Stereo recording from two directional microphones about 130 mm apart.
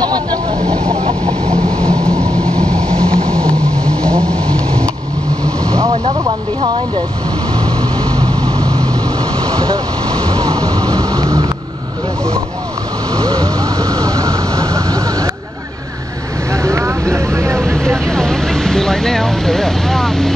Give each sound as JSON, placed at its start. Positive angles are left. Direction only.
{"t": 0.0, "sound": "vehicle", "side_deg": -30}
{"t": 0.9, "sound": "vehicle", "side_deg": -50}
{"t": 1.9, "sound": "vehicle", "side_deg": -25}
{"t": 2.6, "sound": "vehicle", "side_deg": 5}
{"t": 8.2, "sound": "vehicle", "side_deg": -35}
{"t": 10.3, "sound": "music", "side_deg": -30}
{"t": 13.1, "sound": "vehicle", "side_deg": -30}
{"t": 16.6, "sound": "vehicle", "side_deg": -25}
{"t": 17.7, "sound": "vehicle", "side_deg": 5}